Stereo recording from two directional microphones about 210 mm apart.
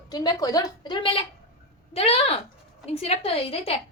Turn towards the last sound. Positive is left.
turn(degrees=30)  # may be behind; listen again after turning